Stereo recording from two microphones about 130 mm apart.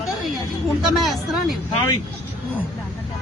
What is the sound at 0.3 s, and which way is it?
Speech, centre (ahead or behind).